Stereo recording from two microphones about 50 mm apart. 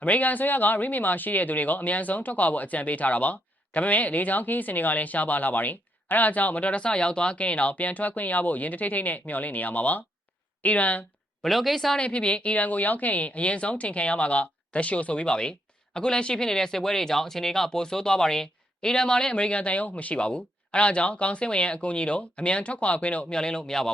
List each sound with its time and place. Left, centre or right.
0.0 s speech: left
11.4 s speech: centre
11.9 s speech: left